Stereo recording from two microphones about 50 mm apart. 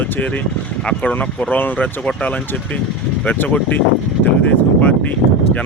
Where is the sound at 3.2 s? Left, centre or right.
Left.